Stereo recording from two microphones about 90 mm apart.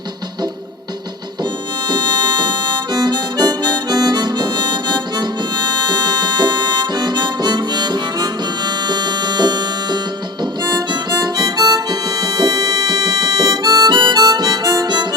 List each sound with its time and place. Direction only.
1.9 s harmonica: 50° right (ahead or behind)